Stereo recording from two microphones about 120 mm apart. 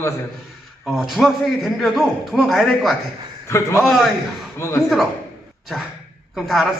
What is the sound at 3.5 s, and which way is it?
Speech, 25° left (ahead or behind).